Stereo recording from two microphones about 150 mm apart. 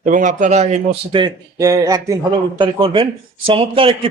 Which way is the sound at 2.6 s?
35° right (ahead or behind).